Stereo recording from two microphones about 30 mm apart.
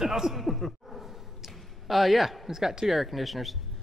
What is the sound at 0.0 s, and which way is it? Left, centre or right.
Speech, centre.